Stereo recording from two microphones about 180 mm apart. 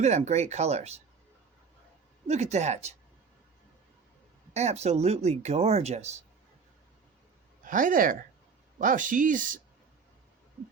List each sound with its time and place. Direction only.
0.0 s speech: 40° right (ahead or behind)
2.2 s speech: 40° right (ahead or behind)
4.5 s speech: 35° right (ahead or behind)
7.6 s speech: 50° right (ahead or behind)